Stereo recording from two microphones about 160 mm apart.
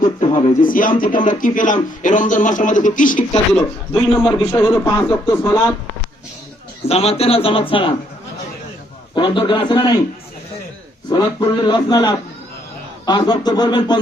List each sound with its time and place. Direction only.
0.2 s a sound: 35° left (ahead or behind)
0.6 s a man's voice: 60° left (ahead or behind)
4.1 s a man's voice: centre (ahead or behind)
4.6 s speech: 20° left (ahead or behind)
6.8 s a man's voice: 40° left (ahead or behind)
9.1 s speech: 30° left (ahead or behind)
11.1 s speech: 30° left (ahead or behind)